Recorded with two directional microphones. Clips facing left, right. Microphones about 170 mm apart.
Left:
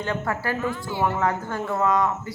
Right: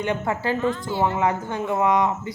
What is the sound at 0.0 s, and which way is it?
Speech, 20° right (ahead or behind).